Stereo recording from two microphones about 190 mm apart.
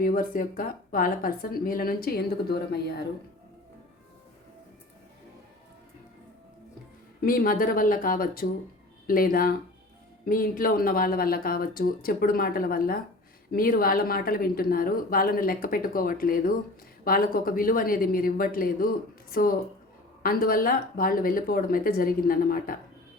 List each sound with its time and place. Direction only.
0.0 s a woman's voice: 50° left (ahead or behind)
7.2 s a woman's voice: 50° left (ahead or behind)